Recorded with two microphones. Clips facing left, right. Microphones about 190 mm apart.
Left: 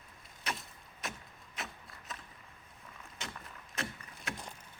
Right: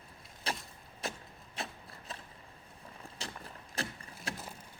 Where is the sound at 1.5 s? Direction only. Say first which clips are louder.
Right 3 dB; 30° right (ahead or behind).